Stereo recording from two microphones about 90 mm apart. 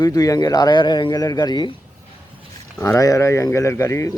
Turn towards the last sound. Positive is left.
turn(degrees=30)  # may be behind; listen again after turning